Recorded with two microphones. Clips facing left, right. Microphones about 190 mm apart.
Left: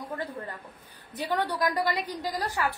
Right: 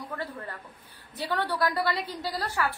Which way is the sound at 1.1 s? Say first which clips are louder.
Left 1 dB; 15° left (ahead or behind).